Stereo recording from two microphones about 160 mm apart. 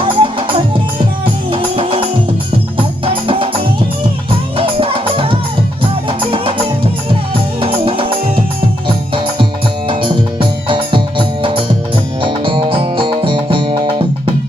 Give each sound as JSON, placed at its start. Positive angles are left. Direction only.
{"t": 0.0, "sound": "music", "side_deg": -35}